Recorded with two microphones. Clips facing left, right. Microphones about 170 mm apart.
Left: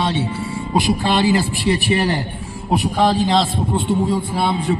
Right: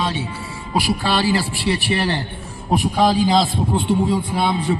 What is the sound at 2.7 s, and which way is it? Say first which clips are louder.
A man's voice: even; centre (ahead or behind).